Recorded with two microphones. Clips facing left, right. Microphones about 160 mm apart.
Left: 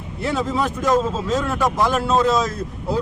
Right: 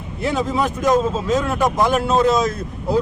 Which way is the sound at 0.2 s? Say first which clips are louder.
Right 2 dB; 15° right (ahead or behind).